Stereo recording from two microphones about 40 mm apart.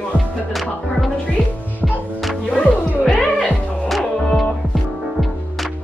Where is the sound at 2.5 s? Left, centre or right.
Left.